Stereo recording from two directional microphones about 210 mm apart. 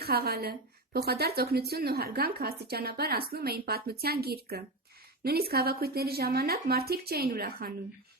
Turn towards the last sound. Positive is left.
turn(degrees=-45)  # may be behind; listen again after turning